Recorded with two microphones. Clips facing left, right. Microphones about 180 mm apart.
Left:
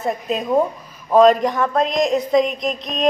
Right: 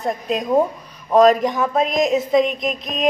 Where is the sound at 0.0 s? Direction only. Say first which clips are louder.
Even; centre (ahead or behind).